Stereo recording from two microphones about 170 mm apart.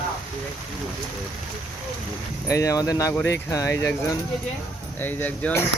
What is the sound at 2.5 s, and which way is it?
Speech, 20° left (ahead or behind).